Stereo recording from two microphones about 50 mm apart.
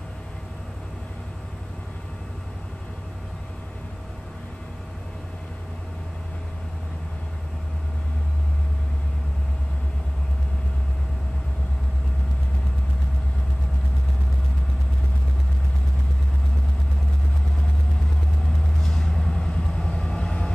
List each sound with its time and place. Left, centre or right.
18.8 s vehicle: centre